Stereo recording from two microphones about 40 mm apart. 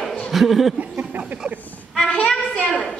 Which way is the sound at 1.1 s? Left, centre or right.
Right.